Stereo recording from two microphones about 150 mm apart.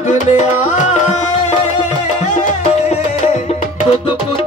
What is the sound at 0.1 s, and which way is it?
Music, 50° left (ahead or behind).